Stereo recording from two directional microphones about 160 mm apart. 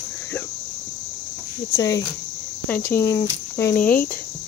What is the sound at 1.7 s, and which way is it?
Speech, 20° left (ahead or behind).